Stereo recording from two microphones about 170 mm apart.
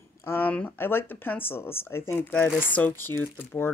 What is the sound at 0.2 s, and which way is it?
Speech, 10° left (ahead or behind).